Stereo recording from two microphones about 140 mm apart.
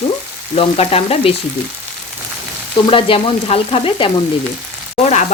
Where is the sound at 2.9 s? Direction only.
40° left (ahead or behind).